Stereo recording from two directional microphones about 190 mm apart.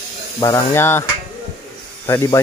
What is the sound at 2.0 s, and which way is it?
Speech, 15° left (ahead or behind).